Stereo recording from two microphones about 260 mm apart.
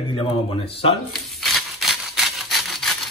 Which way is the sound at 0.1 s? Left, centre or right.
Centre.